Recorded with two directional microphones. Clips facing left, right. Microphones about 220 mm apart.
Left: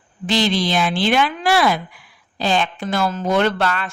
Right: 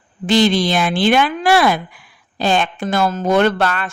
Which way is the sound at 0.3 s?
50° right (ahead or behind).